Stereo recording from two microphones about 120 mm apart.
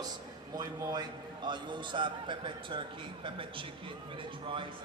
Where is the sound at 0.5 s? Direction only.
30° right (ahead or behind).